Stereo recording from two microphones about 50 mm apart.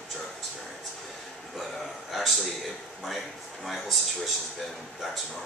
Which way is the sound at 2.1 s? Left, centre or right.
Centre.